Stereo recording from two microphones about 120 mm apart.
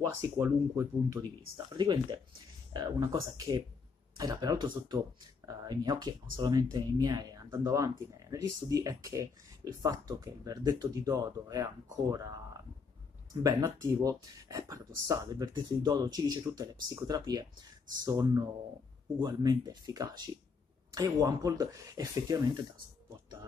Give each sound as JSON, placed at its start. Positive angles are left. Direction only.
{"t": 0.0, "sound": "speech", "side_deg": -25}
{"t": 1.7, "sound": "speech", "side_deg": -40}